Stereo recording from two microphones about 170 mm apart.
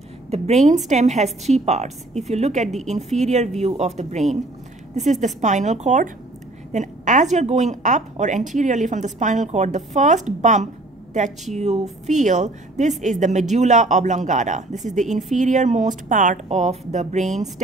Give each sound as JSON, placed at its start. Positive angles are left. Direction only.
{"t": 0.3, "sound": "a woman's voice", "side_deg": -40}